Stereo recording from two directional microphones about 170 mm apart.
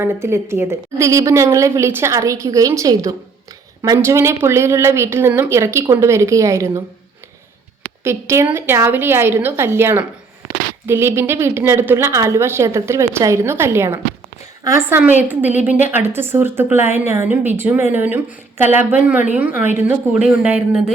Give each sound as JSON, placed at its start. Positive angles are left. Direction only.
{"t": 0.0, "sound": "a woman's voice", "side_deg": -15}
{"t": 8.0, "sound": "a woman's voice", "side_deg": -15}